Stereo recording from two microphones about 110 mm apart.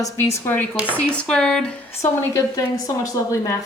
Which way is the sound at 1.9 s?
25° left (ahead or behind).